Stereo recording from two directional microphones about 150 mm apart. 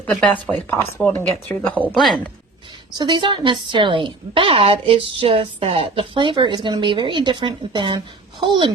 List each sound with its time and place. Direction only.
0.0 s speech: 5° left (ahead or behind)
1.7 s speech: 10° right (ahead or behind)
3.0 s a woman's voice: 30° right (ahead or behind)